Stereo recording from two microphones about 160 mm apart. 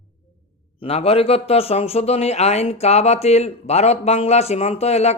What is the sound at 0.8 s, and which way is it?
Speech, 40° left (ahead or behind).